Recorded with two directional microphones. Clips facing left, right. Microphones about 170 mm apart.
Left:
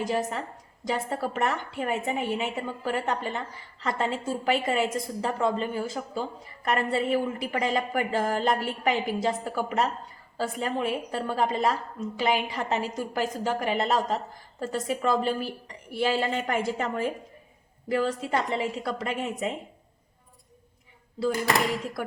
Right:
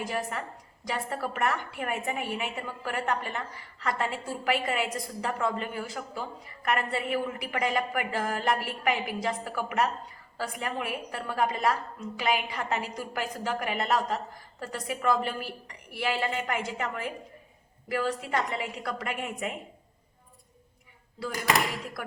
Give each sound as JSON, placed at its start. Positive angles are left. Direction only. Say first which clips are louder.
{"t": 0.0, "sound": "a woman's voice", "louder": "left 4 dB", "side_deg": 25}
{"t": 21.2, "sound": "a woman's voice", "louder": "left 8 dB", "side_deg": 25}